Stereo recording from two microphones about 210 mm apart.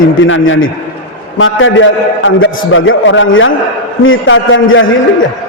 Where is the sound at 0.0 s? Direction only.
65° left (ahead or behind).